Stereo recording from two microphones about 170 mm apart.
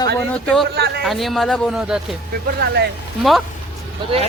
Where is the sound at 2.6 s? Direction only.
75° right (ahead or behind).